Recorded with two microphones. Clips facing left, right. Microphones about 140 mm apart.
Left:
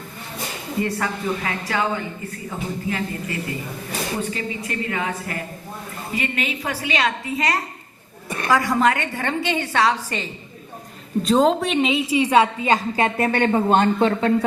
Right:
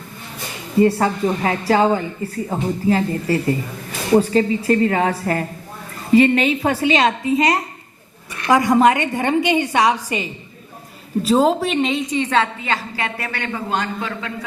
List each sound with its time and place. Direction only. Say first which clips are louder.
0.8 s a woman's voice: right 9 dB; 30° right (ahead or behind); by 14.1 s 25° left (ahead or behind)
14.1 s speech: left 9 dB; 40° left (ahead or behind)